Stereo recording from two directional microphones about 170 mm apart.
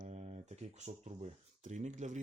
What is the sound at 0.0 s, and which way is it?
Speech, 40° right (ahead or behind).